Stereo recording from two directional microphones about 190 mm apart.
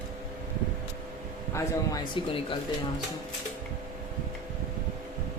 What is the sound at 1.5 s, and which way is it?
Speech, 20° left (ahead or behind).